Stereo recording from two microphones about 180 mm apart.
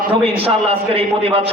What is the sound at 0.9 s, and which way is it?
Speech, 30° right (ahead or behind).